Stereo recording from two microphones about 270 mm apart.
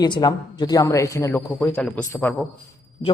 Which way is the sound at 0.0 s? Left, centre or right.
Centre.